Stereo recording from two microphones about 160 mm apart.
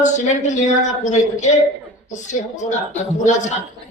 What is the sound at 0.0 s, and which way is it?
A man's voice, 50° left (ahead or behind).